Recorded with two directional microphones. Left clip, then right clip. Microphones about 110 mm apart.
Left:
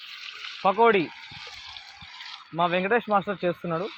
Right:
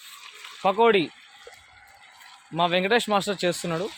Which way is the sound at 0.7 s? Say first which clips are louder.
Right 1 dB; 30° right (ahead or behind).